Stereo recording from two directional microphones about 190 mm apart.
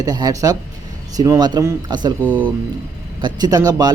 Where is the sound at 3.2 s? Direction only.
20° right (ahead or behind).